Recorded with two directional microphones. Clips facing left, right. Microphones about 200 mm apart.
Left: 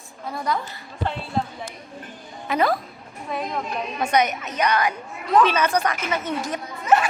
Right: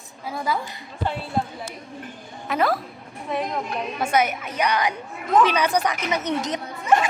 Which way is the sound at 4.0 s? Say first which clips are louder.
Left 1 dB; 5° right (ahead or behind).